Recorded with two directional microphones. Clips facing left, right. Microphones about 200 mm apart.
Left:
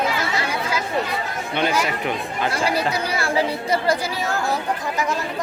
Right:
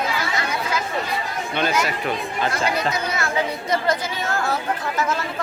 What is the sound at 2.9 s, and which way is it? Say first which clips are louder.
Speech: left 2 dB; 30° left (ahead or behind).